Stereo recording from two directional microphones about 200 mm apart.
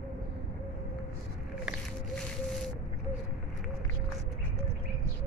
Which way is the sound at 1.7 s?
Centre (ahead or behind).